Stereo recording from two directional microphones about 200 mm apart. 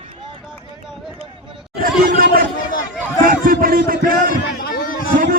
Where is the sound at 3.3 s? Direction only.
45° right (ahead or behind).